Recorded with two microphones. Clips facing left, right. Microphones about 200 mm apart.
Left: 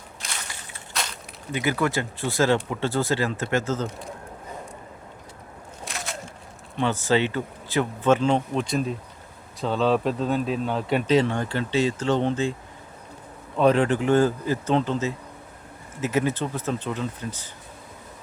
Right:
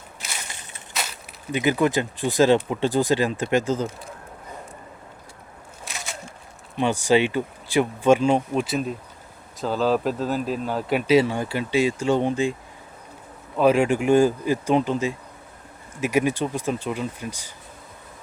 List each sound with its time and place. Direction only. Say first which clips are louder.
0.2 s walk: even; 5° right (ahead or behind)
0.9 s a sound: even; centre (ahead or behind)
1.5 s speech: right 4 dB; 20° right (ahead or behind)
5.8 s a sound: left 2 dB; centre (ahead or behind)
6.7 s speech: right 3 dB; 15° right (ahead or behind)
13.6 s speech: right 1 dB; 10° right (ahead or behind)